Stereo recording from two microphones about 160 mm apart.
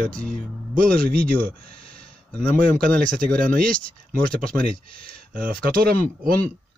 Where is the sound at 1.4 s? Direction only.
70° right (ahead or behind).